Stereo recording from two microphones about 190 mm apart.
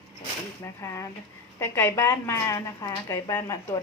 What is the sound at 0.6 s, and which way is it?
Speech, 15° left (ahead or behind).